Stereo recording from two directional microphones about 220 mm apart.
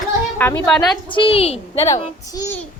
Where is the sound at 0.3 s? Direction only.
10° left (ahead or behind).